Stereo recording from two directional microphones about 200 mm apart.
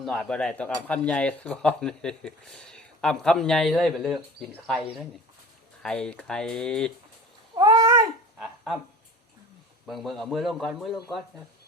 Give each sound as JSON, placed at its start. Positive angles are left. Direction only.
{"t": 0.0, "sound": "speech", "side_deg": 0}
{"t": 7.5, "sound": "cat", "side_deg": -20}
{"t": 8.4, "sound": "a sound", "side_deg": 0}
{"t": 9.8, "sound": "speech", "side_deg": 0}